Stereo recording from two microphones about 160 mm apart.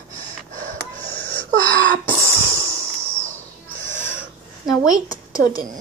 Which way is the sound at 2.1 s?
20° right (ahead or behind).